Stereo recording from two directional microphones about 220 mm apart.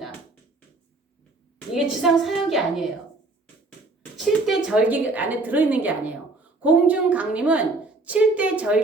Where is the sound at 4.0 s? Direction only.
Centre (ahead or behind).